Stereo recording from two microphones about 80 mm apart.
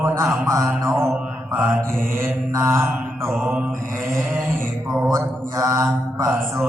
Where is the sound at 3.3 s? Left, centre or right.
Centre.